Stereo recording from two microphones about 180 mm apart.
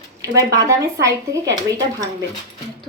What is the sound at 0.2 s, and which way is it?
A woman's voice, 20° right (ahead or behind).